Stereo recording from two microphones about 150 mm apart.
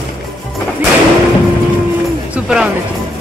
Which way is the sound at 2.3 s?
5° right (ahead or behind).